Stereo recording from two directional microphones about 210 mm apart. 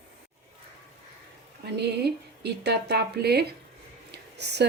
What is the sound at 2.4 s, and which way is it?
Speech, 50° right (ahead or behind).